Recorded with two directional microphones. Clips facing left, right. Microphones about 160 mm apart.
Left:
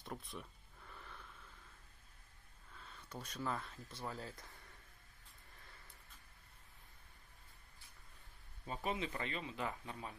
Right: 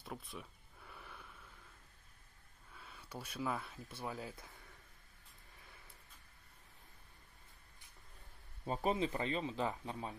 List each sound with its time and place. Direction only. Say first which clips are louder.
0.0 s a sound: even; centre (ahead or behind)
2.7 s speech: right 1 dB; 10° right (ahead or behind)
8.6 s speech: right 6 dB; 35° right (ahead or behind)